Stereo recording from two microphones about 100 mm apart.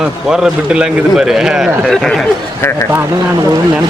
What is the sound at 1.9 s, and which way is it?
Speech, 5° left (ahead or behind).